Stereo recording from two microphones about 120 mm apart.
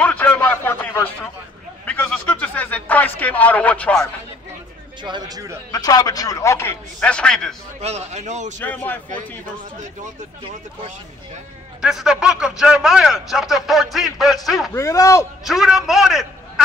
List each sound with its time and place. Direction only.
0.0 s a sound: 10° left (ahead or behind)
5.0 s speech: 40° right (ahead or behind)
5.7 s a man's voice: 35° left (ahead or behind); by 7.5 s 5° left (ahead or behind)
7.8 s a man's voice: 65° right (ahead or behind)
8.5 s speech: 15° left (ahead or behind)
11.8 s speech: 5° right (ahead or behind)
14.7 s a man's voice: 25° left (ahead or behind)
15.4 s a man's voice: centre (ahead or behind)